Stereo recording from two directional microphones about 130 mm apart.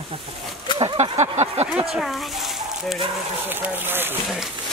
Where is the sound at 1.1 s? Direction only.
60° right (ahead or behind).